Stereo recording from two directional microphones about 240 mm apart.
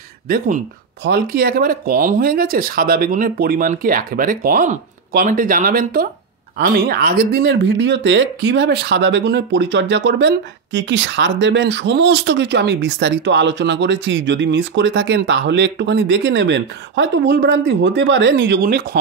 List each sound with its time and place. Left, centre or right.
1.0 s speech: right